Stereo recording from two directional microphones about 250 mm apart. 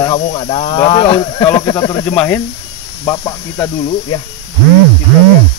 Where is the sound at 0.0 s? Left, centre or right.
Centre.